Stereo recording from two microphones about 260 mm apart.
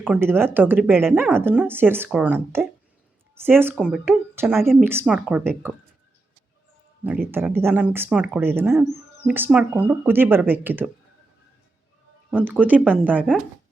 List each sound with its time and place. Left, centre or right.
0.0 s speech: centre
7.3 s speech: centre
12.3 s speech: centre